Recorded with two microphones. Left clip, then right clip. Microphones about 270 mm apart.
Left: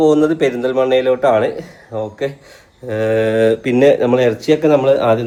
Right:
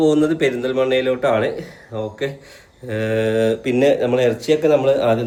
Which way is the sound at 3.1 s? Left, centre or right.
Left.